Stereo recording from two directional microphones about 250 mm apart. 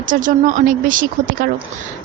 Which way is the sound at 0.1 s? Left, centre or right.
Right.